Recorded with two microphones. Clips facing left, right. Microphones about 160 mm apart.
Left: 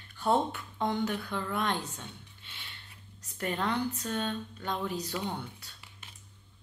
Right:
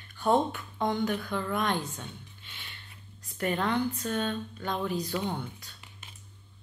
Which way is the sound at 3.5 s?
20° left (ahead or behind).